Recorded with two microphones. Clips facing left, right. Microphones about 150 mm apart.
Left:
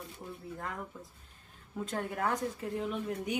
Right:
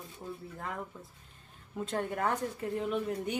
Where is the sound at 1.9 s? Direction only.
Centre (ahead or behind).